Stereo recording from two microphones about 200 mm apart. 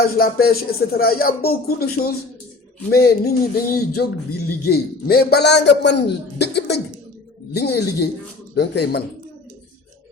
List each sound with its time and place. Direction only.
0.2 s a man's voice: 50° left (ahead or behind)